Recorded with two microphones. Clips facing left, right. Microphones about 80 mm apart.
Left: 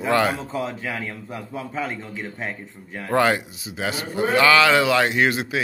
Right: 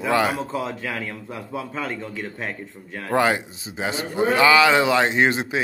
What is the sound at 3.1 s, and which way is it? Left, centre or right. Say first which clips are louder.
Speech: left 1 dB; centre.